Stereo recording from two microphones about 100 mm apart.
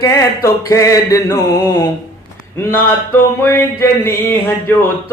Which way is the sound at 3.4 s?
20° left (ahead or behind).